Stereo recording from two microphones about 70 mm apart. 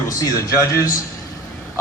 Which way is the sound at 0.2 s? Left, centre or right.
Left.